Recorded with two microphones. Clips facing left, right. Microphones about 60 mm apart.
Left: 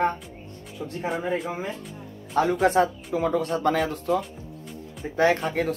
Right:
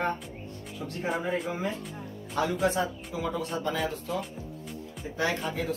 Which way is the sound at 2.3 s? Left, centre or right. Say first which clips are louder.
Left 6 dB; left.